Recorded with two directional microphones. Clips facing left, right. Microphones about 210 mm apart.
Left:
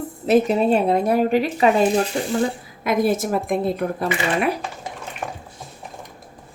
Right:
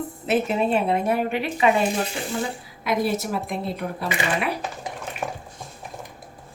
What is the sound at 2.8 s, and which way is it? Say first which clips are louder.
Speech: left 4 dB; 50° left (ahead or behind).